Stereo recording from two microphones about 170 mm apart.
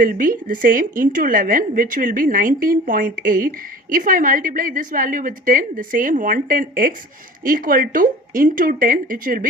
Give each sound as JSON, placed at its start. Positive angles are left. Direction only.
{"t": 0.0, "sound": "a woman's voice", "side_deg": -55}